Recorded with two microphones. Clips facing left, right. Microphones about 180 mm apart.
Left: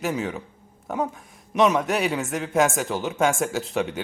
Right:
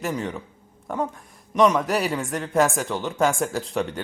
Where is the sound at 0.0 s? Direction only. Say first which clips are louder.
Left 1 dB; 5° left (ahead or behind).